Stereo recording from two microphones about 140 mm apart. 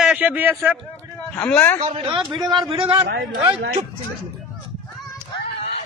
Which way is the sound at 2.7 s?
40° right (ahead or behind).